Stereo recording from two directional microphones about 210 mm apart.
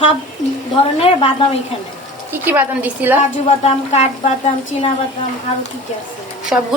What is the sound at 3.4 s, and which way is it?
A woman's voice, 30° left (ahead or behind).